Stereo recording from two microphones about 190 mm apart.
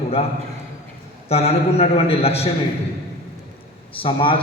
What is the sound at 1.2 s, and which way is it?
A man's voice, 35° left (ahead or behind).